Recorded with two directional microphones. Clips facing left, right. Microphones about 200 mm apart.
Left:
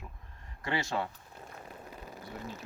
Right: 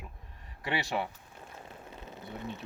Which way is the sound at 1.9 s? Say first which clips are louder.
Right 2 dB; 25° right (ahead or behind).